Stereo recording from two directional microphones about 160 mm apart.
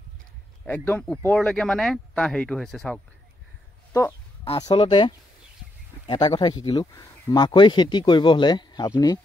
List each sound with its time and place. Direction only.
0.7 s speech: 10° left (ahead or behind)
4.6 s speech: 30° left (ahead or behind)